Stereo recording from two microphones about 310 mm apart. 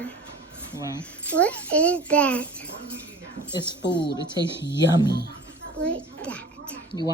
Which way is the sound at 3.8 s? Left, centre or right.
Left.